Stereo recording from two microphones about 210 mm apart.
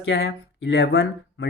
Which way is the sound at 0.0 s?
55° left (ahead or behind).